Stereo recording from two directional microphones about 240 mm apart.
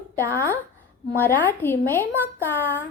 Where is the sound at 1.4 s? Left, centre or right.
Centre.